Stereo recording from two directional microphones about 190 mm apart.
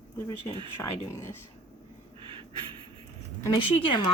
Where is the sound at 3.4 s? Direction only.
20° left (ahead or behind).